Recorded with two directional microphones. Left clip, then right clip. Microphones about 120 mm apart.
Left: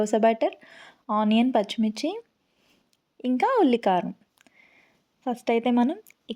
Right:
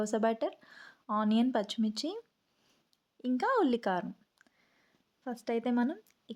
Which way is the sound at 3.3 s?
20° left (ahead or behind).